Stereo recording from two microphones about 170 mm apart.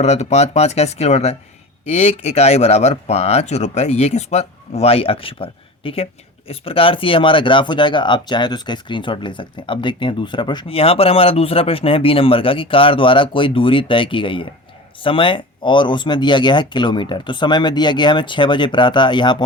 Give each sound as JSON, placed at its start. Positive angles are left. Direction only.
{"t": 0.0, "sound": "speech", "side_deg": 40}